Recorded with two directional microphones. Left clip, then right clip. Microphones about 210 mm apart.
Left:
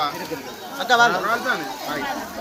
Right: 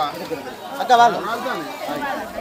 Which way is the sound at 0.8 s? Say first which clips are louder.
Right 3 dB; 25° right (ahead or behind).